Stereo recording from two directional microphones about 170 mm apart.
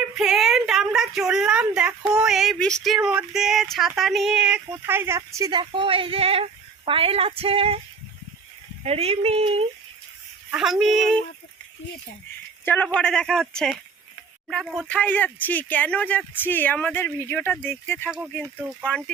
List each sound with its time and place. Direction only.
0.2 s a woman's voice: centre (ahead or behind); by 7.8 s 35° right (ahead or behind)
8.8 s speech: 40° right (ahead or behind)
10.5 s a woman's voice: 5° right (ahead or behind)
12.6 s a woman's voice: 10° left (ahead or behind)
18.4 s speech: 10° right (ahead or behind)
18.9 s speech: 5° left (ahead or behind)